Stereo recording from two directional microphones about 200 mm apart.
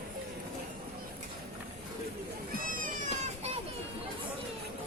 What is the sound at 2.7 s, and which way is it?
Children playing, 40° right (ahead or behind).